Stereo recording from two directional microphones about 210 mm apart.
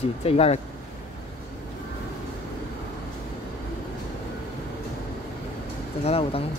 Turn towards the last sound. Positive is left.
turn(degrees=25)  # may be behind; listen again after turning